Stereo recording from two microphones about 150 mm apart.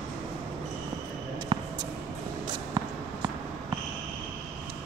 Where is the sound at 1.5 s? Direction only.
35° right (ahead or behind).